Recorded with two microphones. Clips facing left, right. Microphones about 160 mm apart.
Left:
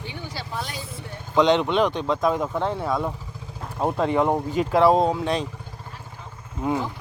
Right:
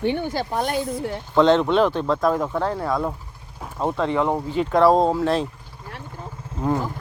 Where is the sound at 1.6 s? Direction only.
5° right (ahead or behind).